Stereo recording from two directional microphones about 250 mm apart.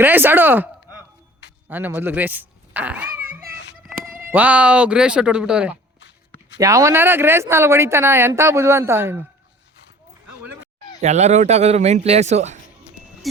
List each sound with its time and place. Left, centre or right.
0.0 s speech: centre
3.8 s a sound: centre
4.3 s speech: centre
11.0 s speech: right